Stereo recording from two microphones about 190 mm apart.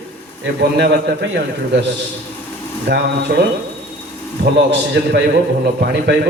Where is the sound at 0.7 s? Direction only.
65° right (ahead or behind).